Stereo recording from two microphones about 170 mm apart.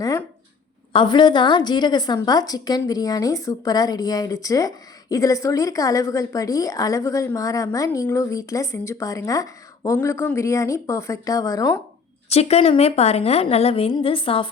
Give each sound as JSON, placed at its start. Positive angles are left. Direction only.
{"t": 0.0, "sound": "a sound", "side_deg": 20}
{"t": 0.9, "sound": "a woman's voice", "side_deg": 25}
{"t": 12.3, "sound": "a woman's voice", "side_deg": 40}